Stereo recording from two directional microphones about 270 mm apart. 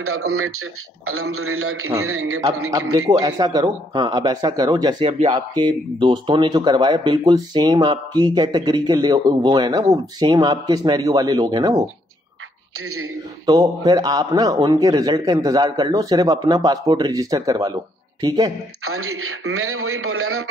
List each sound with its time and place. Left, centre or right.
0.0 s a man's voice: right
3.1 s speech: centre
13.5 s speech: centre
18.9 s a man's voice: right